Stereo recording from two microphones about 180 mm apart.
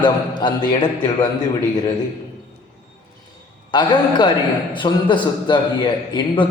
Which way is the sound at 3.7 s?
25° left (ahead or behind).